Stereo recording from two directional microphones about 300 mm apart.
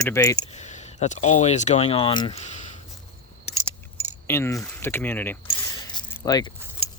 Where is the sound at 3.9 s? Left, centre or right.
Centre.